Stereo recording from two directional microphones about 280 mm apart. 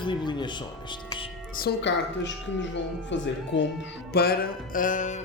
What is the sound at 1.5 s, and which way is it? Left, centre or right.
Speech, left.